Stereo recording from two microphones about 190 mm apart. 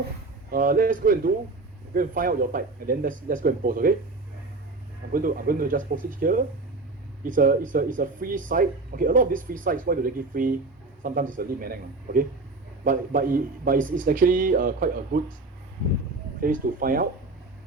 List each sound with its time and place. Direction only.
0.5 s speech: 45° right (ahead or behind)
5.1 s speech: 50° right (ahead or behind)
16.4 s speech: 50° right (ahead or behind)